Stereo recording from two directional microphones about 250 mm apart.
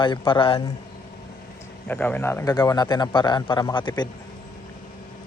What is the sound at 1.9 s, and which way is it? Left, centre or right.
Speech, centre.